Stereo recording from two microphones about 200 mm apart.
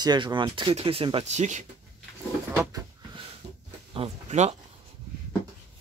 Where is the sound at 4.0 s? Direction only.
35° right (ahead or behind).